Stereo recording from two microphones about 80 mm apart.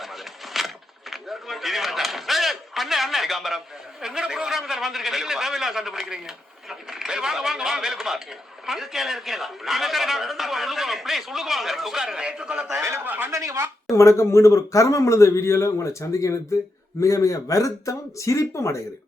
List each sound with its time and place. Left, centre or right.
0.0 s vehicle: centre
1.1 s a sound: centre
4.0 s a man's voice: centre
13.1 s speech: right
13.3 s speech: right
13.9 s a man's voice: left